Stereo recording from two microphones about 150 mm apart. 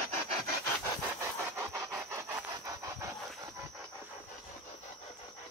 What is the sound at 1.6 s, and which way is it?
Rub, 15° right (ahead or behind).